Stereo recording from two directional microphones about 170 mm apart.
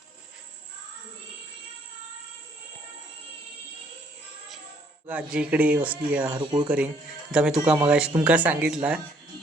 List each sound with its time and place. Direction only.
5.0 s speech: 5° right (ahead or behind)
6.3 s speech: 25° right (ahead or behind)
6.7 s speech: 10° right (ahead or behind)